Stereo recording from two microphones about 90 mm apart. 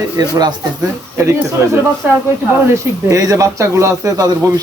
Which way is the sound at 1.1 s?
30° right (ahead or behind).